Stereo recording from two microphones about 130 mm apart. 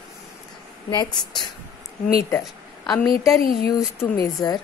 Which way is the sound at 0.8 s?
35° left (ahead or behind).